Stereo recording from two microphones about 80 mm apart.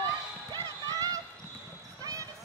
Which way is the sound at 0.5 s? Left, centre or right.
Right.